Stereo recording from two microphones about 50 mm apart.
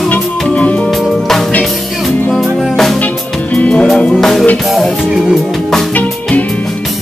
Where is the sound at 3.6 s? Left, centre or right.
Left.